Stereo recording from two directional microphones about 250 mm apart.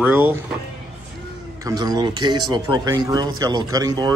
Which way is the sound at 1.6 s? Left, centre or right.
Centre.